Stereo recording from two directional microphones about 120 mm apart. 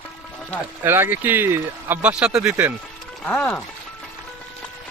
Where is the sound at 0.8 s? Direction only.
20° right (ahead or behind).